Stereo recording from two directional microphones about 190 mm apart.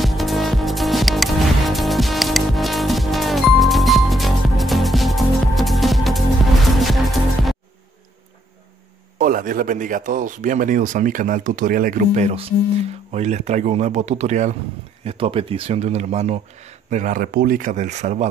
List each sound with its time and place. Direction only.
0.0 s music: centre (ahead or behind)
9.2 s speech: 45° right (ahead or behind)